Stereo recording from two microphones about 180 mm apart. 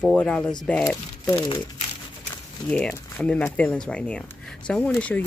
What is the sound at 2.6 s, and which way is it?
Speech, 5° left (ahead or behind).